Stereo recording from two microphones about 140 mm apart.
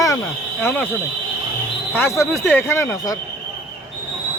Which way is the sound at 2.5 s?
15° left (ahead or behind).